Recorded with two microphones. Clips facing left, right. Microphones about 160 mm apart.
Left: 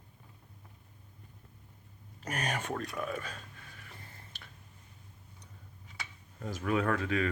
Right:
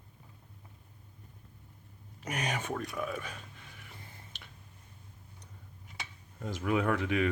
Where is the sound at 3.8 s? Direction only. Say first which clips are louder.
Even; 15° right (ahead or behind).